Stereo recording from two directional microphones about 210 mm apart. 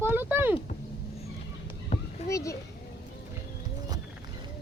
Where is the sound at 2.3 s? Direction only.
15° left (ahead or behind).